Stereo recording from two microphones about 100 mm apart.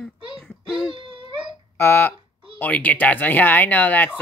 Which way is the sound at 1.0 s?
55° right (ahead or behind).